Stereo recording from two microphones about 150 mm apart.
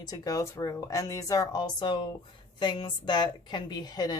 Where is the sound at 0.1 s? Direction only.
20° left (ahead or behind).